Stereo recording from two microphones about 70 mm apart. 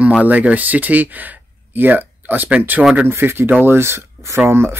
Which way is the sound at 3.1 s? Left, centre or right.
Right.